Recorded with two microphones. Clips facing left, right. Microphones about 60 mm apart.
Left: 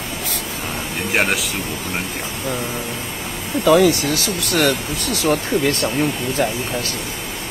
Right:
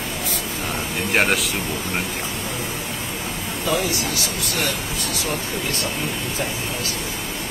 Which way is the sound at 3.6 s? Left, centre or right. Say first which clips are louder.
Left 10 dB; left.